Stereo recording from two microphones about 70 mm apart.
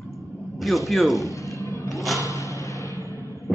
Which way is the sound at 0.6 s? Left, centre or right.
Centre.